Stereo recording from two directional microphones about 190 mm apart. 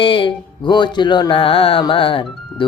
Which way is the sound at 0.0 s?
25° left (ahead or behind).